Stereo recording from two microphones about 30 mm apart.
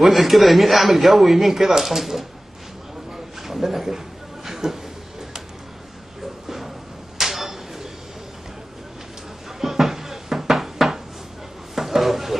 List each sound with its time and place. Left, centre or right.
0.0 s speech: centre
3.4 s a man's voice: centre
4.6 s speech: right
7.2 s a sound: centre
9.6 s cupboard open or close: centre
11.7 s a sound: centre